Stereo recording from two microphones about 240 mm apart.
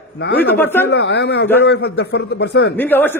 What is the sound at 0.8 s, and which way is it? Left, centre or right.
A man's voice, left.